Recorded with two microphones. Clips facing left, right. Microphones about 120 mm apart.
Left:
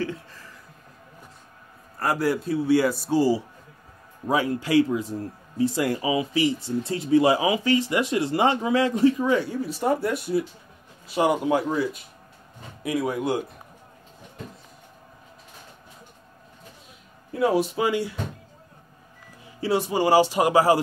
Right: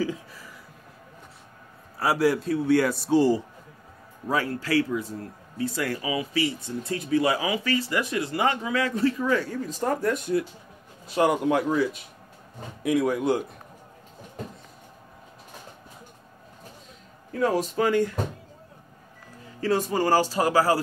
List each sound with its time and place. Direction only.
0.0 s a sound: 10° right (ahead or behind)
2.0 s a man's voice: centre (ahead or behind)
4.3 s a man's voice: 15° left (ahead or behind); by 13.5 s centre (ahead or behind)
17.3 s speech: 10° left (ahead or behind)
19.6 s speech: 10° left (ahead or behind)